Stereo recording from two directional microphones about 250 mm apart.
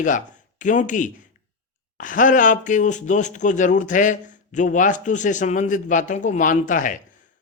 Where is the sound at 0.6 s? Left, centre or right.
Left.